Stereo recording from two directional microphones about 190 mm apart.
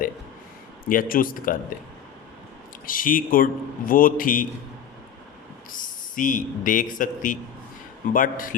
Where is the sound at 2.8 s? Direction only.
45° left (ahead or behind).